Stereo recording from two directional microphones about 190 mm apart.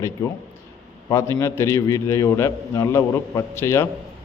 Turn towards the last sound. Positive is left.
turn(degrees=15)  # may be behind; listen again after turning